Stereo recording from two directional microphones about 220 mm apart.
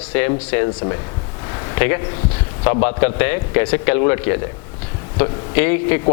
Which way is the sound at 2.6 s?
20° left (ahead or behind).